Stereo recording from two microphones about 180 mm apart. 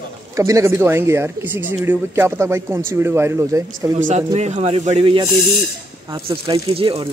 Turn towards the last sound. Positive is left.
turn(degrees=-30)  # may be behind; listen again after turning